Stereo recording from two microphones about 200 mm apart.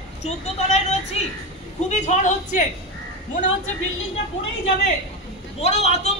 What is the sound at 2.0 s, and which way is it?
Speech, 40° left (ahead or behind).